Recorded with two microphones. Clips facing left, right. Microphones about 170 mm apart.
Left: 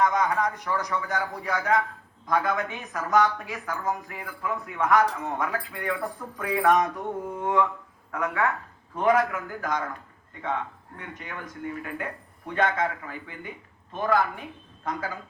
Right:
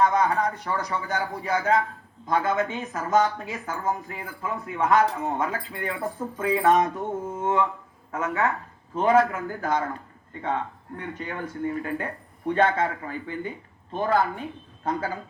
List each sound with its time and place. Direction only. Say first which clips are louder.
0.0 s speech: right 2 dB; 35° right (ahead or behind)
1.0 s speech: right 1 dB; 20° right (ahead or behind)
8.1 s speech: right 1 dB; 25° right (ahead or behind)